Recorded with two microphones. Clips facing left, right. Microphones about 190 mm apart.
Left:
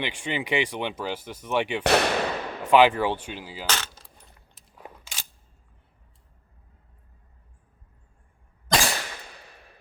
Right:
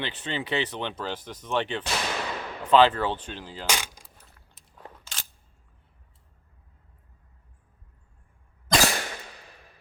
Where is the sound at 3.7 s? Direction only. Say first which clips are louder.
Right 1 dB; 10° right (ahead or behind).